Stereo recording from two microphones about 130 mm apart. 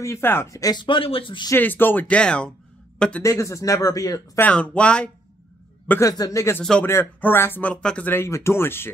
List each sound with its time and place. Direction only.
0.0 s speech: 20° left (ahead or behind); by 1.5 s 40° left (ahead or behind)
1.5 s speech: 15° left (ahead or behind)
3.2 s speech: 25° left (ahead or behind)
4.4 s speech: 10° left (ahead or behind)
5.9 s speech: 25° left (ahead or behind)
6.6 s speech: 5° left (ahead or behind)
6.9 s speech: 15° left (ahead or behind)